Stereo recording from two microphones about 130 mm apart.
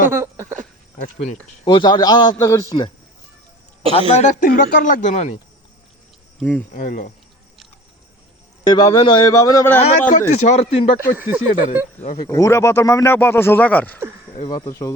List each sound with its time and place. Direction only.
0.1 s a sound: 20° right (ahead or behind)
1.6 s a man's voice: 35° left (ahead or behind)
4.1 s speech: 75° left (ahead or behind)
6.7 s speech: 85° left
8.6 s a man's voice: 30° left (ahead or behind)
9.7 s speech: 65° left (ahead or behind)
11.2 s speech: 15° right (ahead or behind)
11.9 s speech: 60° left (ahead or behind)
12.3 s speech: 20° left (ahead or behind)
14.4 s a man's voice: 30° left (ahead or behind)